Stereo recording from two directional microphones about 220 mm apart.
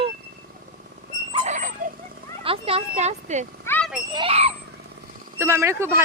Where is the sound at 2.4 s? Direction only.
25° right (ahead or behind).